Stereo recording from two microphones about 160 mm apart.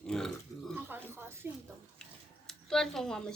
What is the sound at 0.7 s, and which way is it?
Speech, 15° right (ahead or behind).